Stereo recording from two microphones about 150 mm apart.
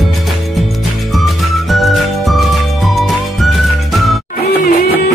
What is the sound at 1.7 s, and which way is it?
Music, centre (ahead or behind).